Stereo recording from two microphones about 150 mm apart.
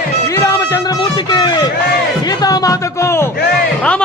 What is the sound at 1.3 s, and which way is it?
Run, 30° left (ahead or behind).